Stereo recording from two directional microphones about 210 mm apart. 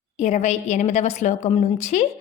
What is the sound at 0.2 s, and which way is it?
A woman's voice, 30° left (ahead or behind).